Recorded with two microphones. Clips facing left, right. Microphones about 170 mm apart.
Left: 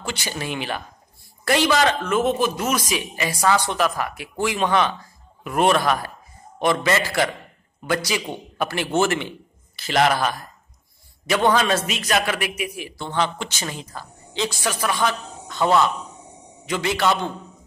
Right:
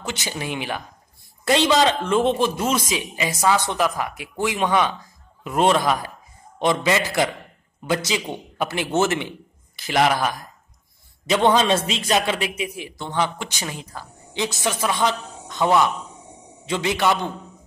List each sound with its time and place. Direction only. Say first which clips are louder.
0.0 s a woman's voice: even; 20° right (ahead or behind)
11.2 s a man's voice: right 1 dB; 25° right (ahead or behind)